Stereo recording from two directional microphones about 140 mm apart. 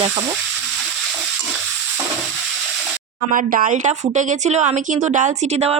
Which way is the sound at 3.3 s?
75° right (ahead or behind).